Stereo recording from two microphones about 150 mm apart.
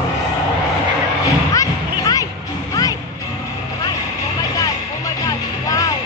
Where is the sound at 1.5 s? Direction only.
20° left (ahead or behind).